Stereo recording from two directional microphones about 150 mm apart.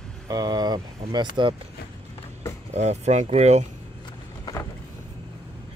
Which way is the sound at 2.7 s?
50° right (ahead or behind).